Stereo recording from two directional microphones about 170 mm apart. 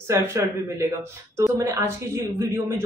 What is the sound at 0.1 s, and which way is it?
Speech, 15° right (ahead or behind).